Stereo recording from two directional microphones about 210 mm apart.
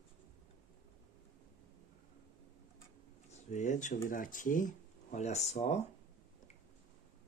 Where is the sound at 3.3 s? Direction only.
35° left (ahead or behind).